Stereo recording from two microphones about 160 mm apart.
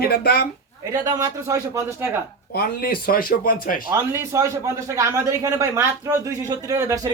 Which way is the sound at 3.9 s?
15° right (ahead or behind).